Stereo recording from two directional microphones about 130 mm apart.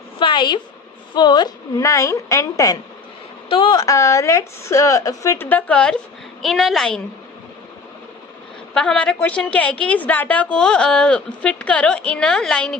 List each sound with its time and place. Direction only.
0.2 s a woman's voice: 35° left (ahead or behind)
3.5 s a woman's voice: 35° left (ahead or behind); by 7.0 s 5° left (ahead or behind)
8.7 s a woman's voice: 5° left (ahead or behind)